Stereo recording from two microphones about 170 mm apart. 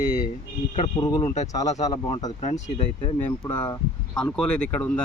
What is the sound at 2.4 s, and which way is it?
Speech, 40° left (ahead or behind).